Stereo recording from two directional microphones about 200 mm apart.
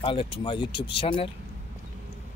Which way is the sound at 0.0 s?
25° left (ahead or behind).